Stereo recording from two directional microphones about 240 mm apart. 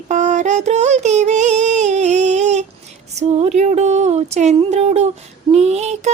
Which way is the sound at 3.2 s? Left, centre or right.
Right.